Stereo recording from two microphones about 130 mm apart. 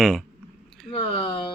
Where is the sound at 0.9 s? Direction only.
40° left (ahead or behind).